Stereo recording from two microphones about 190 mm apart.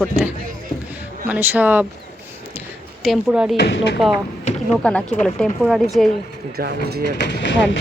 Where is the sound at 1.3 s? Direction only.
10° right (ahead or behind).